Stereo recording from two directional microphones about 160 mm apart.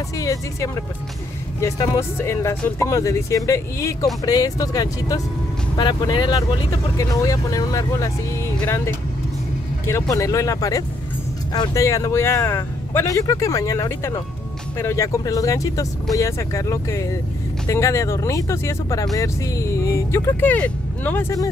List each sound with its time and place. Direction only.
0.2 s speech: 20° left (ahead or behind)